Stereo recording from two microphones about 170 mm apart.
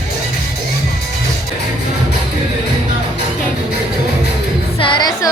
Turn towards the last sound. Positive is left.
turn(degrees=25)  # may be behind; listen again after turning